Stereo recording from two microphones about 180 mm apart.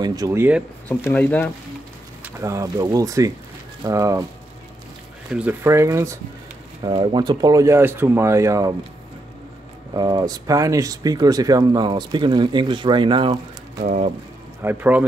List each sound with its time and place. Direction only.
0.0 s speech: 20° right (ahead or behind)
0.8 s speech: 10° left (ahead or behind)
2.2 s speech: 15° right (ahead or behind)
5.3 s speech: 10° right (ahead or behind)
6.8 s speech: 25° right (ahead or behind)
9.9 s speech: 25° right (ahead or behind)
13.8 s speech: 40° right (ahead or behind)
14.6 s speech: 10° right (ahead or behind)